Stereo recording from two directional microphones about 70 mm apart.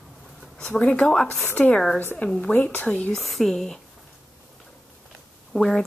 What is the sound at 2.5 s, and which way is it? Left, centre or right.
Speech, left.